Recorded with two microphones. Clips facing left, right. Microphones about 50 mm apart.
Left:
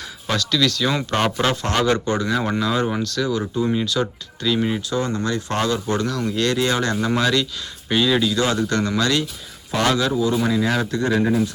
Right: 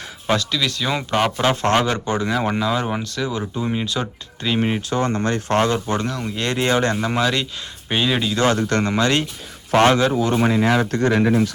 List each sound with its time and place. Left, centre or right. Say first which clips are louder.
0.3 s speech: even; centre
1.7 s speech: even; right
7.0 s speech: left 1 dB; centre
8.4 s speech: right 2 dB; right
10.2 s speech: right 1 dB; right
10.9 s speech: right 2 dB; right
11.2 s speech: right 2 dB; right